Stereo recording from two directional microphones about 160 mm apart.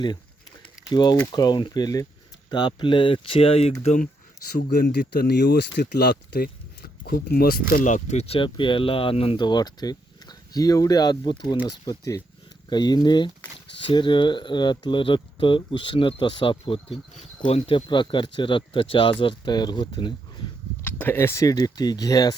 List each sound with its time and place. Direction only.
0.9 s speech: 25° left (ahead or behind); by 4.1 s 45° left (ahead or behind)
4.7 s speech: 75° left (ahead or behind)
7.9 s speech: 50° left (ahead or behind); by 20.5 s 30° left (ahead or behind)
20.8 s speech: 15° left (ahead or behind)